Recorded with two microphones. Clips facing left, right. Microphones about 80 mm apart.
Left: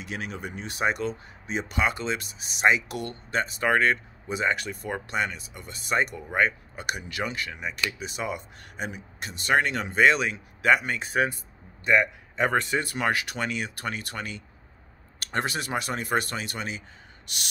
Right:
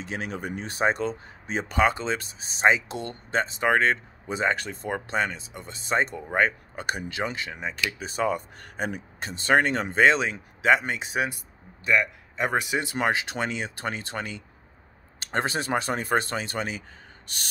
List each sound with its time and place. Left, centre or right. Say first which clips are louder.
0.0 s speech: right 2 dB; right
9.3 s speech: right 2 dB; right
11.8 s a man's voice: left 1 dB; left
12.4 s speech: left 2 dB; centre
12.6 s speech: right 1 dB; centre; by 17.4 s right